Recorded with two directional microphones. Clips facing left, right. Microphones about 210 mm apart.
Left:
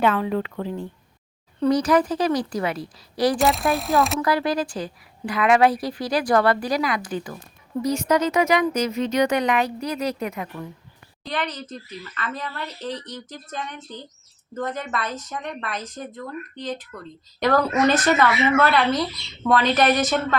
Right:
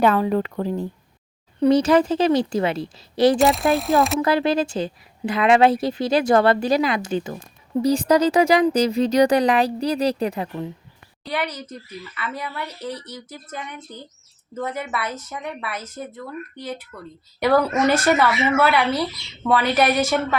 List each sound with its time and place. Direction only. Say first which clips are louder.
0.0 s a woman's voice: right 3 dB; 40° right (ahead or behind)
1.7 s a woman's voice: right 3 dB; 25° right (ahead or behind)
3.3 s speech: right 3 dB; centre (ahead or behind)
4.2 s a woman's voice: right 3 dB; 25° right (ahead or behind)
11.3 s a woman's voice: right 2 dB; 10° right (ahead or behind)